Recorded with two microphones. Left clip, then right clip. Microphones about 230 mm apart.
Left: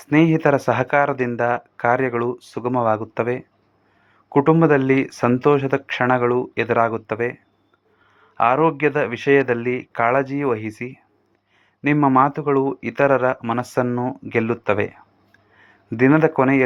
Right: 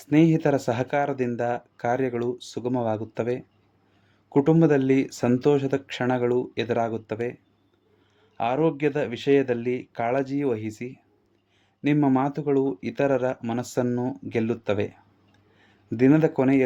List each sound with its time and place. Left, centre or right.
0.0 s speech: centre